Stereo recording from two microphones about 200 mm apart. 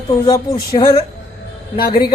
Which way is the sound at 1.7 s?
50° left (ahead or behind).